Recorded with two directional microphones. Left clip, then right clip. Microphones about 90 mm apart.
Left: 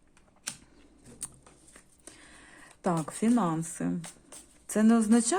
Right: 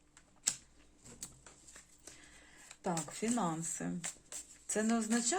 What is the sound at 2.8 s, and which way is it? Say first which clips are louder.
Speech: left 8 dB; 60° left (ahead or behind).